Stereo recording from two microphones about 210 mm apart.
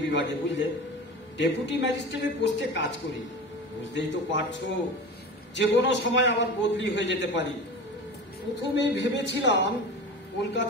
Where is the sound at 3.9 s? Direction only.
60° left (ahead or behind).